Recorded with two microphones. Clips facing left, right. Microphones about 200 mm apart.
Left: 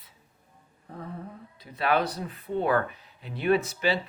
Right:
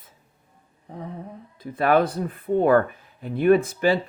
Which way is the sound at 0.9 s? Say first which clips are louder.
Right 4 dB; 20° right (ahead or behind).